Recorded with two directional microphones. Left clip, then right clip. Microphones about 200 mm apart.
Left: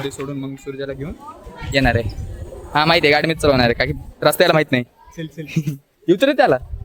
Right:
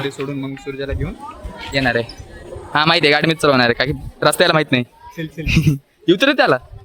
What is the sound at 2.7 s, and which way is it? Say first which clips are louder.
A man's voice: even; 10° right (ahead or behind).